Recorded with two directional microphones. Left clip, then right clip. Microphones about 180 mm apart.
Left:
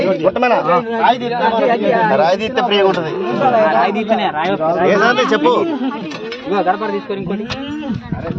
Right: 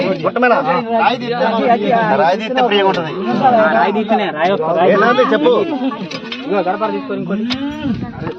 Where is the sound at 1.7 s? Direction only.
40° left (ahead or behind).